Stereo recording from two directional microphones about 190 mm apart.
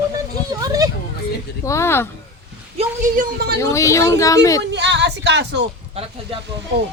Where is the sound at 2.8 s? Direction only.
40° right (ahead or behind).